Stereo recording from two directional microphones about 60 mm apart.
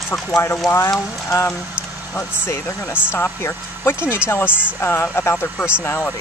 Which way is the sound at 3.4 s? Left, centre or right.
Left.